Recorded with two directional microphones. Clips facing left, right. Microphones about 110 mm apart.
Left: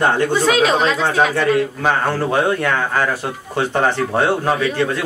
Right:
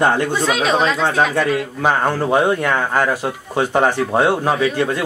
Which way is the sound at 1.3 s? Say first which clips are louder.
Left 2 dB; 10° right (ahead or behind).